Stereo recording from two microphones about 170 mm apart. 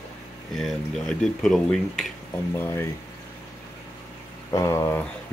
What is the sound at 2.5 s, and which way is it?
Speech, 15° left (ahead or behind).